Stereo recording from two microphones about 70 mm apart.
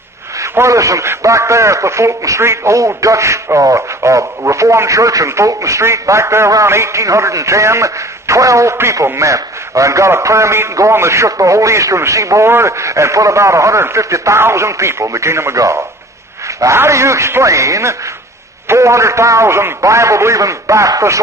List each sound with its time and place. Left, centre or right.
0.4 s a man's voice: right